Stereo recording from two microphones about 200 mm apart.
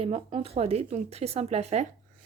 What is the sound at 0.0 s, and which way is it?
Speech, 30° right (ahead or behind).